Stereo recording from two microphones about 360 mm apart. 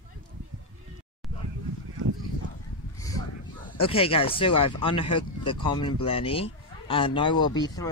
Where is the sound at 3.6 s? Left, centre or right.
Centre.